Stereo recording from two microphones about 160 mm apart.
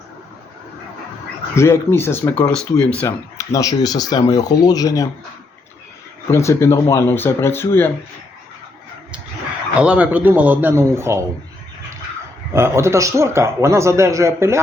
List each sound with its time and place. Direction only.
1.5 s speech: 15° left (ahead or behind)
2.4 s speech: 5° left (ahead or behind)
3.3 s speech: 20° left (ahead or behind)
6.3 s speech: 20° left (ahead or behind)
9.8 s speech: 10° right (ahead or behind)
12.5 s speech: 15° right (ahead or behind)